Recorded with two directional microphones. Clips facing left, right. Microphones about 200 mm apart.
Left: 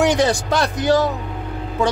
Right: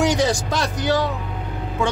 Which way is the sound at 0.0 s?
60° left (ahead or behind).